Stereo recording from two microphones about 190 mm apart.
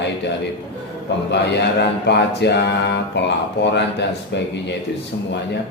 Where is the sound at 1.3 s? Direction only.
65° left (ahead or behind).